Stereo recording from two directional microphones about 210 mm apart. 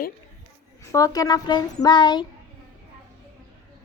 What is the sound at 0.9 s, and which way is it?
A child's voice, 15° left (ahead or behind).